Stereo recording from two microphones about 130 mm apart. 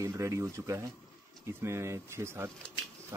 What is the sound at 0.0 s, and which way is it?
Speech, 25° right (ahead or behind).